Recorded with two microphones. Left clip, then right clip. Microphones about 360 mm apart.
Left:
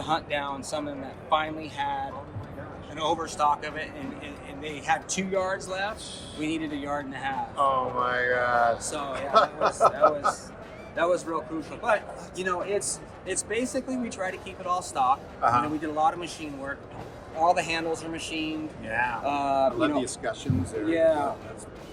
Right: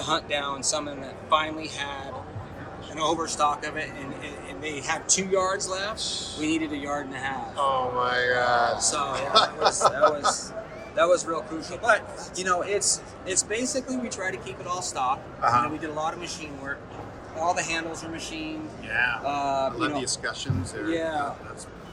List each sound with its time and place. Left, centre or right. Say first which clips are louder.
0.0 s a man's voice: right 1 dB; left
7.5 s speech: even; centre
10.9 s a man's voice: right 4 dB; left
15.4 s a man's voice: right 3 dB; centre
16.0 s a man's voice: left 8 dB; left